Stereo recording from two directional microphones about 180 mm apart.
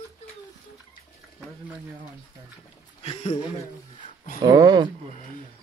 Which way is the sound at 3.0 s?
35° left (ahead or behind).